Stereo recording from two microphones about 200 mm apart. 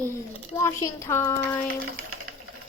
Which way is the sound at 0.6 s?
15° left (ahead or behind).